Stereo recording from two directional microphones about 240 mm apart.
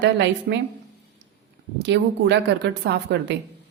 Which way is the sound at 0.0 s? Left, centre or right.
Right.